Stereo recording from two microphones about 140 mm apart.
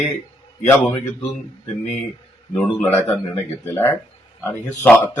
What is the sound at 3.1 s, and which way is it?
Speech, 15° left (ahead or behind).